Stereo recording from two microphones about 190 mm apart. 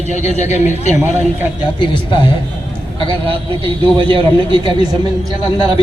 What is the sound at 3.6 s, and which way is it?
Speech, 25° right (ahead or behind).